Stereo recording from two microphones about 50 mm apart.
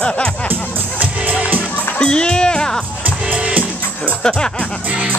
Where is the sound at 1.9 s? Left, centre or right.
Centre.